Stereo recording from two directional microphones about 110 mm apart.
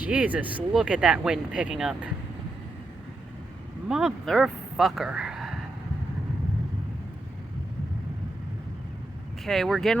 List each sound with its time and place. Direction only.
0.0 s speech: 15° right (ahead or behind)
3.8 s speech: 5° right (ahead or behind)
9.4 s speech: centre (ahead or behind)